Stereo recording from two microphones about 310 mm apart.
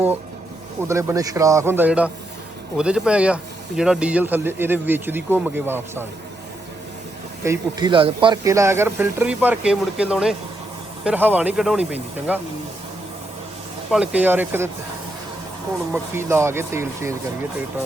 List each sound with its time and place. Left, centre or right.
0.9 s a man's voice: centre
7.4 s a man's voice: centre
13.9 s a man's voice: centre
15.9 s a man's voice: centre